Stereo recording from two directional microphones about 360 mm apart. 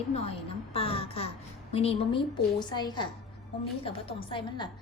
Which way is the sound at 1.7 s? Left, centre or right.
Centre.